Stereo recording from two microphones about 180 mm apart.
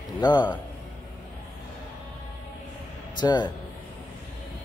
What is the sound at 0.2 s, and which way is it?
Speech, 25° left (ahead or behind).